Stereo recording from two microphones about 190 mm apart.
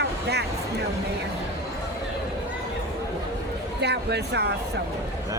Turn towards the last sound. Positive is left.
turn(degrees=-60)  # may be behind; listen again after turning